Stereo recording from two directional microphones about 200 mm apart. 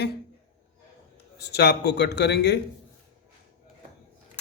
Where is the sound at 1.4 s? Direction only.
55° left (ahead or behind).